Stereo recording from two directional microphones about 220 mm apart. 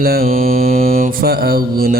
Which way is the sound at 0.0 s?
40° right (ahead or behind).